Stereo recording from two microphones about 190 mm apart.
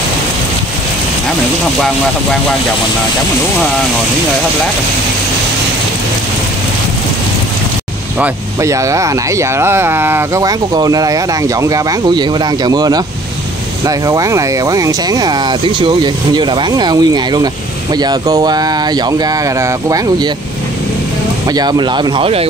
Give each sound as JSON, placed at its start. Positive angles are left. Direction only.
{"t": 8.2, "sound": "speech", "side_deg": -15}
{"t": 21.5, "sound": "speech", "side_deg": -20}